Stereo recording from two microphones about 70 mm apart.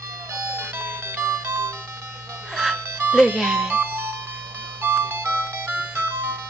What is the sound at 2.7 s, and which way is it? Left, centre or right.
Music, right.